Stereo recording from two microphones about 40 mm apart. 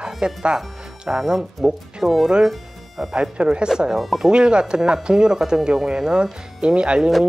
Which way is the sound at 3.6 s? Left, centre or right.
Centre.